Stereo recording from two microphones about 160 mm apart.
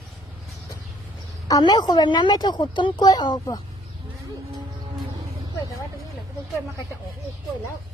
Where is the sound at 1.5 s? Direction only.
25° left (ahead or behind).